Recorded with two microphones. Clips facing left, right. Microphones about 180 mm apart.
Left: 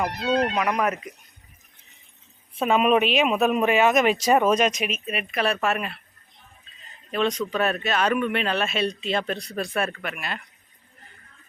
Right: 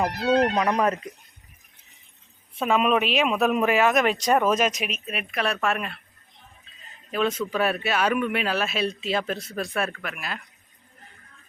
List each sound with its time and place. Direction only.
0.5 s speech: 30° right (ahead or behind)
2.6 s speech: centre (ahead or behind)
7.1 s speech: 5° right (ahead or behind)